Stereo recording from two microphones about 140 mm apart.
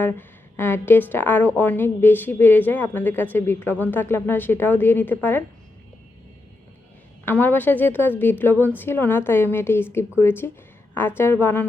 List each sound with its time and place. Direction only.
0.0 s speech: 15° left (ahead or behind)
7.3 s speech: 15° left (ahead or behind)